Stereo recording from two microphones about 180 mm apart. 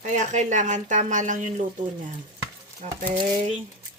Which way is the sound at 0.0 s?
45° right (ahead or behind).